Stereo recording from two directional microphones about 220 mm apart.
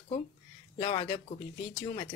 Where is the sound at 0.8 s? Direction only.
25° left (ahead or behind).